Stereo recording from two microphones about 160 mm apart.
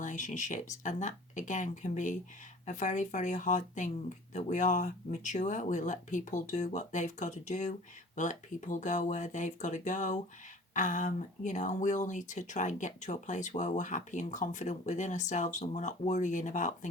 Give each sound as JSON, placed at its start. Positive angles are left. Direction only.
{"t": 0.0, "sound": "speech", "side_deg": 50}